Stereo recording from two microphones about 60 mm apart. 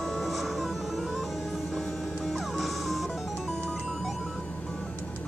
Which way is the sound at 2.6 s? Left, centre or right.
Centre.